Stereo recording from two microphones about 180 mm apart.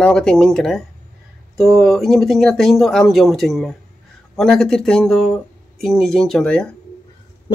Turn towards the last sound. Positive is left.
turn(degrees=5)  # may be behind; listen again after turning